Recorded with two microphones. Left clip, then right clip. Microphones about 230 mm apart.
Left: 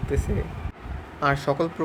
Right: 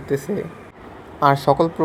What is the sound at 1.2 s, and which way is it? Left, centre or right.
Speech, centre.